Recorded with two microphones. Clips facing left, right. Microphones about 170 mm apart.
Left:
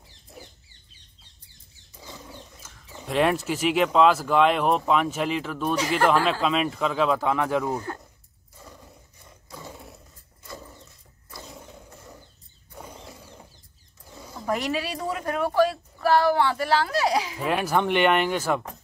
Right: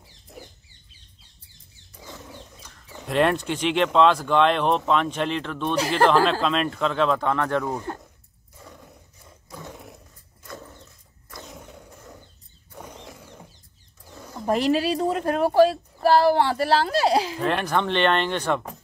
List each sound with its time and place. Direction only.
2.0 s speech: centre (ahead or behind)
8.5 s roar: centre (ahead or behind)
10.4 s vehicle: 5° left (ahead or behind)
11.2 s roaring cats: centre (ahead or behind)
12.7 s wild animals: centre (ahead or behind)
14.4 s speech: 30° right (ahead or behind)
17.4 s speech: 5° left (ahead or behind)